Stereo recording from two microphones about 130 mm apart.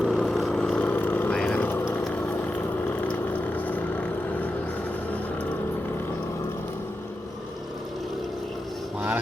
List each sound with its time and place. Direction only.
0.0 s vehicle: centre (ahead or behind)